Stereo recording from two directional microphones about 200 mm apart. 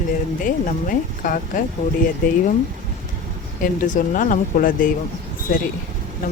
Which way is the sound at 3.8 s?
40° left (ahead or behind).